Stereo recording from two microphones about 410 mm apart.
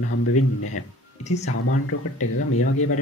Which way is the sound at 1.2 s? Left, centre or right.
Centre.